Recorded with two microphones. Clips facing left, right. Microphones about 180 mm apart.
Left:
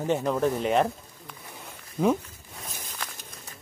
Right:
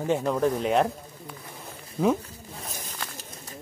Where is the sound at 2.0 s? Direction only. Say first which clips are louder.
Even; 5° right (ahead or behind).